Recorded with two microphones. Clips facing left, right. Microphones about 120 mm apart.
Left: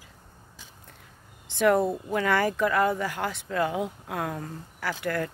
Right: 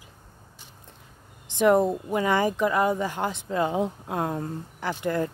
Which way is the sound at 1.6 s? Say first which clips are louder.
Right 2 dB; 20° right (ahead or behind).